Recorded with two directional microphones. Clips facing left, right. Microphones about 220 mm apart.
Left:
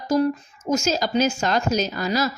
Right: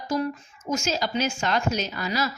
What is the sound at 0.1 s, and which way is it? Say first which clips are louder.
A woman's voice: left 7 dB; 40° left (ahead or behind).